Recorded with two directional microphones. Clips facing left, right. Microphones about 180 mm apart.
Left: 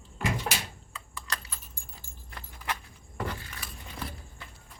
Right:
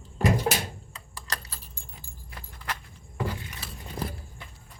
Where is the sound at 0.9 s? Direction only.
35° right (ahead or behind).